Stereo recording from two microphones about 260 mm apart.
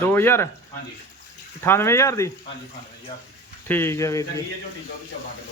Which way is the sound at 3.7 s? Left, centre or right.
Centre.